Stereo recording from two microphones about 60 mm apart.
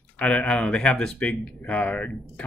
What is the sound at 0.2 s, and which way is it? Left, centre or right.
Speech, left.